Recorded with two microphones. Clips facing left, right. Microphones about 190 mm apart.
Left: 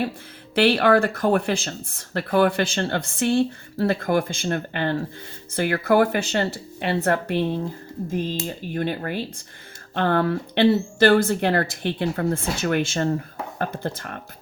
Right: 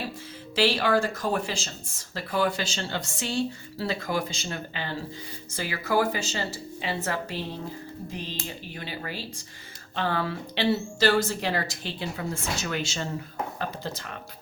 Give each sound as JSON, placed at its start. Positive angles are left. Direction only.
{"t": 0.5, "sound": "speech", "side_deg": 60}
{"t": 8.1, "sound": "speech", "side_deg": 50}